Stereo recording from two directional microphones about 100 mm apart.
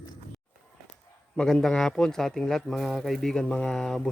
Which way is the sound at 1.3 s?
5° left (ahead or behind).